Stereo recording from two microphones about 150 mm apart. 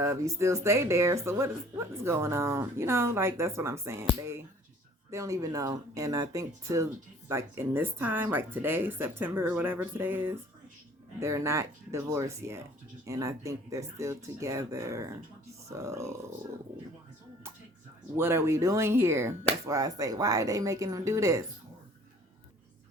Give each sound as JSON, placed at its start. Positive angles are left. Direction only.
{"t": 0.0, "sound": "speech", "side_deg": -20}
{"t": 18.2, "sound": "speech", "side_deg": -15}